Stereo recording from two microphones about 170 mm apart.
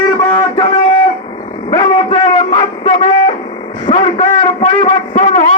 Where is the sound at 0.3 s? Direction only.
30° left (ahead or behind).